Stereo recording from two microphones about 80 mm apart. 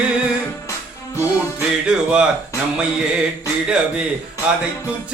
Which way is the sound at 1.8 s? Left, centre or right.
Centre.